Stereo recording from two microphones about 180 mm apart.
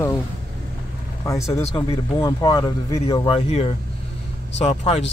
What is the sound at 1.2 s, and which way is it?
A man's voice, 15° left (ahead or behind).